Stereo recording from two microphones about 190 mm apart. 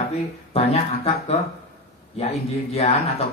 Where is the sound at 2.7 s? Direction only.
30° left (ahead or behind).